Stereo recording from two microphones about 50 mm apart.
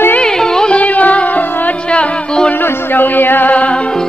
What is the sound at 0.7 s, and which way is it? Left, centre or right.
Music, left.